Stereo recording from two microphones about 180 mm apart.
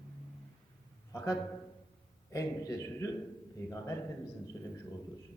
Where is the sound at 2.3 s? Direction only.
15° left (ahead or behind).